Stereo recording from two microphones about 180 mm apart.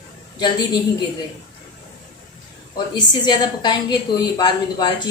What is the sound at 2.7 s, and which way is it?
A woman's voice, 25° left (ahead or behind).